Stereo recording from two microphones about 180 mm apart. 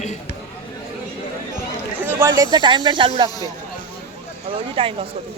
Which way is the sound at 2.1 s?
15° right (ahead or behind).